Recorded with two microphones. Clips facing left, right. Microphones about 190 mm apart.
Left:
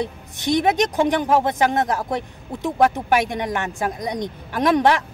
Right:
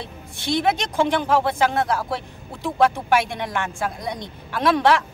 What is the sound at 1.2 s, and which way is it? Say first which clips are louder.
Speech: left 1 dB; 20° left (ahead or behind).